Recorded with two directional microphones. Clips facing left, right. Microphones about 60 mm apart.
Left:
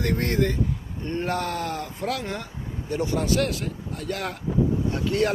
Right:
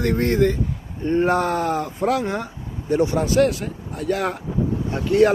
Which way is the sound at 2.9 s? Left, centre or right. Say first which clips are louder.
Right 6 dB; centre.